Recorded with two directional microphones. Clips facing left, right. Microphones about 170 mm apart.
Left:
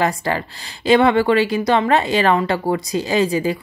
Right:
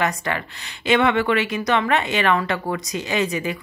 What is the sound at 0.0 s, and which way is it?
Speech, 30° left (ahead or behind).